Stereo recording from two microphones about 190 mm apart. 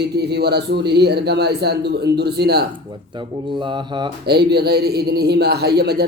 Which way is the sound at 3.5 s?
25° right (ahead or behind).